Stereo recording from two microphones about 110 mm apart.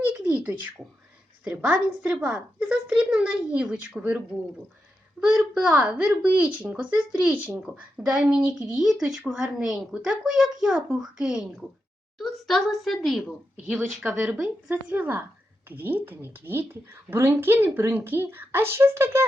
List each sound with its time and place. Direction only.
0.0 s a sound: 15° right (ahead or behind)
1.5 s a woman's voice: 10° right (ahead or behind)
5.2 s a woman's voice: 5° right (ahead or behind)